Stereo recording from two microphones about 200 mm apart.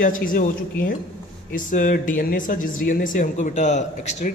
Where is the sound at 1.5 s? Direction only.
40° left (ahead or behind).